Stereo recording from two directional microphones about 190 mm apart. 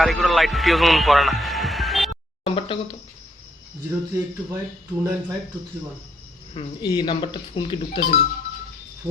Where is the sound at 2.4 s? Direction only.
30° left (ahead or behind).